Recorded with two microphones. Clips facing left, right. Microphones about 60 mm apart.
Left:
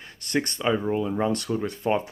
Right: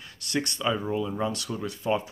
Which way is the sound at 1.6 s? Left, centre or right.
Left.